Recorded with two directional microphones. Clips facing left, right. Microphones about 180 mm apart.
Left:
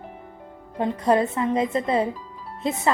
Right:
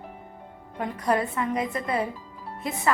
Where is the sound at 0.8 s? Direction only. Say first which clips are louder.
Left 5 dB; 25° left (ahead or behind).